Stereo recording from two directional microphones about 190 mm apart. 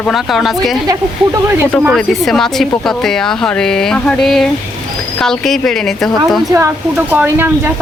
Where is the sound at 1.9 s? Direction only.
Centre (ahead or behind).